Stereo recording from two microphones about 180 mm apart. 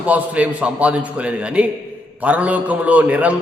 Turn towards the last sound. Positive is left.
turn(degrees=-5)  # may be behind; listen again after turning